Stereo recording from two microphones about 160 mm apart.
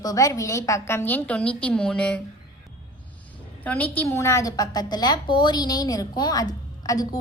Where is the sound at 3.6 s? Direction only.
10° left (ahead or behind).